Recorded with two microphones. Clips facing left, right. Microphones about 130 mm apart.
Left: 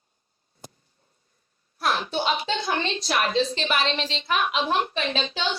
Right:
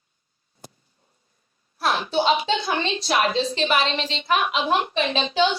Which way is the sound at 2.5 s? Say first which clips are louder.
Right 2 dB; 45° left (ahead or behind).